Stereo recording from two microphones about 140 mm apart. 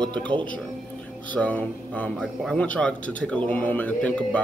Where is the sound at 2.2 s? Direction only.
Centre (ahead or behind).